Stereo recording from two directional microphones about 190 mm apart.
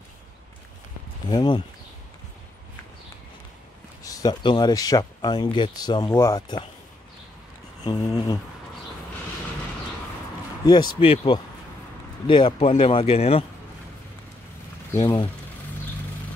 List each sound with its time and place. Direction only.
1.3 s speech: 25° left (ahead or behind)
4.0 s speech: 20° left (ahead or behind)
7.8 s speech: 25° left (ahead or behind)
11.0 s speech: 30° left (ahead or behind)
15.0 s speech: 25° left (ahead or behind)